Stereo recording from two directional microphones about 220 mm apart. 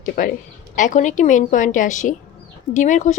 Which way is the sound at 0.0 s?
40° left (ahead or behind).